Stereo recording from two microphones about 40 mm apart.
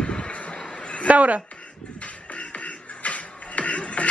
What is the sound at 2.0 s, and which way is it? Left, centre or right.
Music, left.